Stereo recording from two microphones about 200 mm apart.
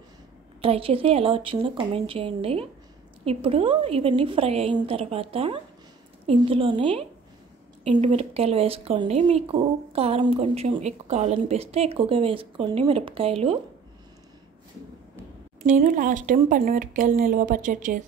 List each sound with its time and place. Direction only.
0.6 s a woman's voice: 30° right (ahead or behind)
15.6 s speech: 40° right (ahead or behind)